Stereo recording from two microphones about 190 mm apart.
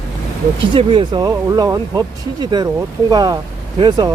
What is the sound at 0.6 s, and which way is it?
Speech, 25° right (ahead or behind).